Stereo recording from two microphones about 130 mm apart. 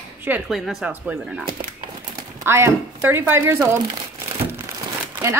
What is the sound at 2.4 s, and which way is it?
A woman's voice, 20° right (ahead or behind).